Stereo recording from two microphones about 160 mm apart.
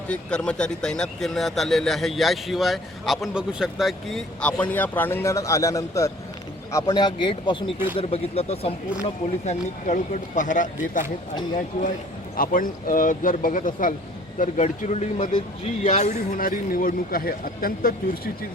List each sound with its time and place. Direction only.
0.1 s speech: 5° left (ahead or behind); by 10.7 s 55° left (ahead or behind)
12.4 s a man's voice: 60° left (ahead or behind)